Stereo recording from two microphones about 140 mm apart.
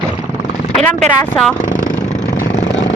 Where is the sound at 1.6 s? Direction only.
65° left (ahead or behind).